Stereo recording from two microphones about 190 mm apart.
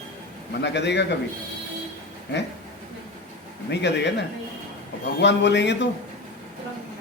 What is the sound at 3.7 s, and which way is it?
Speech, 65° left (ahead or behind).